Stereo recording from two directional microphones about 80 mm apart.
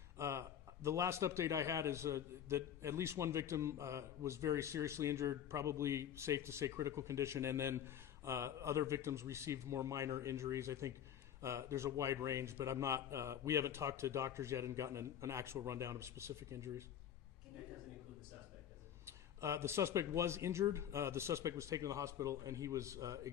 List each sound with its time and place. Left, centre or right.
0.2 s a man's voice: right
19.0 s a man's voice: right